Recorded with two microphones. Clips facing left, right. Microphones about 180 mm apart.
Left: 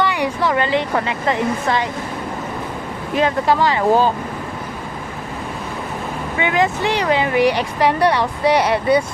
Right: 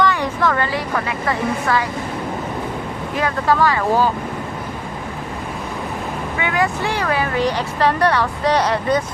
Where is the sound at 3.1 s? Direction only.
20° left (ahead or behind).